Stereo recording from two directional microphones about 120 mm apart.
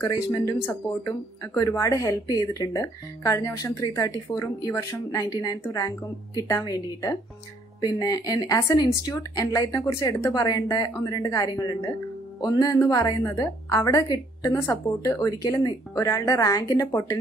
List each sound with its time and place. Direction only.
0.0 s a woman's voice: 30° left (ahead or behind)